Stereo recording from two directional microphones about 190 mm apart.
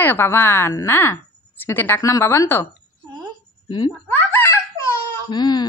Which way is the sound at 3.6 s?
20° left (ahead or behind).